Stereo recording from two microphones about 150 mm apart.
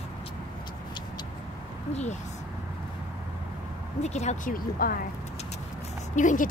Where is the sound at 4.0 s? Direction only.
50° left (ahead or behind).